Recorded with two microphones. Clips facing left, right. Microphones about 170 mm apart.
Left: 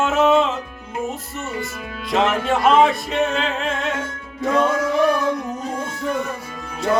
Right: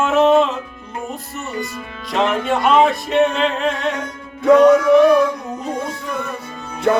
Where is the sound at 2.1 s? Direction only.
Centre (ahead or behind).